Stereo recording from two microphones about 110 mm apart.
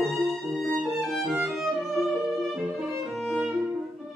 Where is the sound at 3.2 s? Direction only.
Centre (ahead or behind).